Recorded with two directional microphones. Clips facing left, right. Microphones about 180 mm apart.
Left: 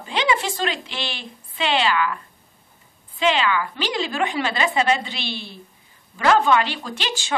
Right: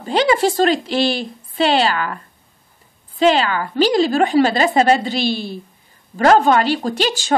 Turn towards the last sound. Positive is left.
turn(degrees=-40)  # may be behind; listen again after turning